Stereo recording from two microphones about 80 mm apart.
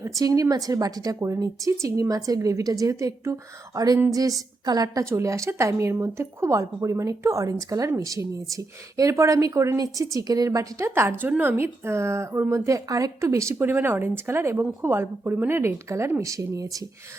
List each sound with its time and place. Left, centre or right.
0.2 s a woman's voice: right
5.0 s a woman's voice: right